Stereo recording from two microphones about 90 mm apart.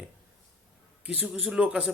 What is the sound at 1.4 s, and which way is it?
Speech, 10° right (ahead or behind).